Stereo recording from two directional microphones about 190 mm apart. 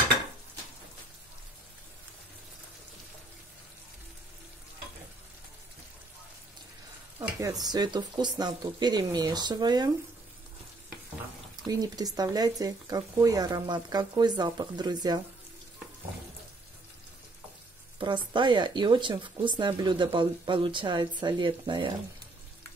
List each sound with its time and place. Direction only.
7.2 s stir: 15° right (ahead or behind)
7.6 s speech: 20° right (ahead or behind)
11.6 s speech: 20° right (ahead or behind)
17.9 s speech: 25° right (ahead or behind)